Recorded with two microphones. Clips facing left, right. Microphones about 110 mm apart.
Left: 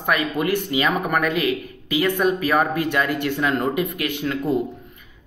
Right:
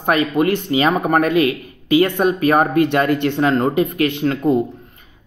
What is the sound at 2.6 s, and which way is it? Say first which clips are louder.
Speech: right 6 dB; 60° right (ahead or behind).